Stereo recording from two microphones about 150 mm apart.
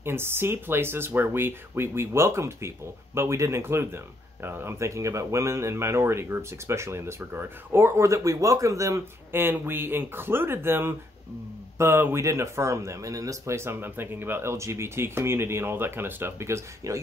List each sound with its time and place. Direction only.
0.0 s speech: 15° right (ahead or behind)